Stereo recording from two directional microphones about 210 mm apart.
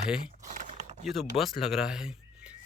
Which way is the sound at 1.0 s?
Centre (ahead or behind).